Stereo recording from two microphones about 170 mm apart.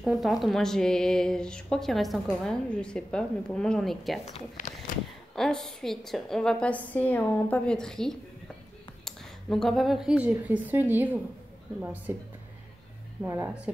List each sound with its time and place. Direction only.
0.0 s speech: centre (ahead or behind)
4.3 s speech: 45° left (ahead or behind)
5.3 s a woman's voice: centre (ahead or behind)